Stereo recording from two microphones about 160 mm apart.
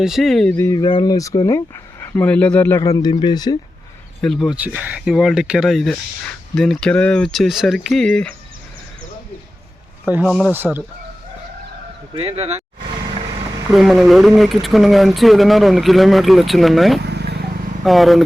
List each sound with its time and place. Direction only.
0.0 s speech: centre (ahead or behind)
0.6 s speech: 25° left (ahead or behind)
4.2 s speech: centre (ahead or behind)
10.2 s speech: centre (ahead or behind)
10.5 s speech: 10° right (ahead or behind)
12.1 s speech: 35° right (ahead or behind)
13.7 s speech: centre (ahead or behind)
17.1 s vehicle: 90° right
17.8 s speech: centre (ahead or behind)